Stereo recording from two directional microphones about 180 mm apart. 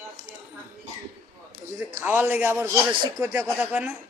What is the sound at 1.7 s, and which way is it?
A man's voice, 15° right (ahead or behind).